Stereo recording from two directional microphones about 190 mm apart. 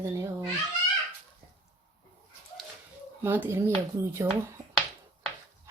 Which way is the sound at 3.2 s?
10° right (ahead or behind).